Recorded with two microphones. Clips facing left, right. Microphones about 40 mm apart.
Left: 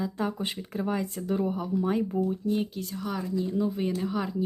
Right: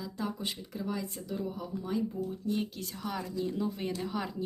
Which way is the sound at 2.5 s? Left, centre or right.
Centre.